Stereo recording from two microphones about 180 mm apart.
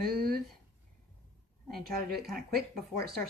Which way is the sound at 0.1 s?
55° right (ahead or behind).